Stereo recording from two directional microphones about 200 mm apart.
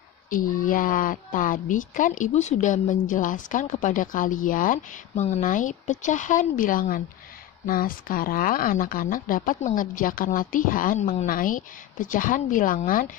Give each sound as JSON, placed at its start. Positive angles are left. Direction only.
{"t": 0.3, "sound": "a woman's voice", "side_deg": 45}